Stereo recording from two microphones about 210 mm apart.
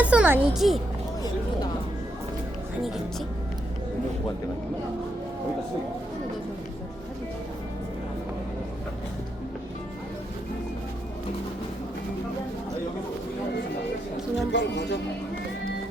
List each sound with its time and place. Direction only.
0.0 s music: 5° right (ahead or behind)
14.5 s speech: 55° left (ahead or behind)